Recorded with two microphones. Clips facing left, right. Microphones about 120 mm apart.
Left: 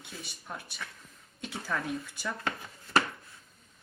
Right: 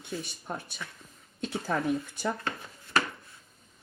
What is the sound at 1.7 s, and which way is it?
Speech, 25° right (ahead or behind).